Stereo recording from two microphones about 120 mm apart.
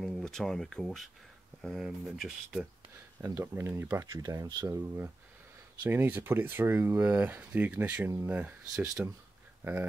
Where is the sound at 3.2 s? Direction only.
25° right (ahead or behind).